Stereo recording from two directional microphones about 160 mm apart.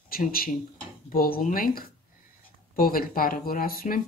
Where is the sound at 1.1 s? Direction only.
65° left (ahead or behind).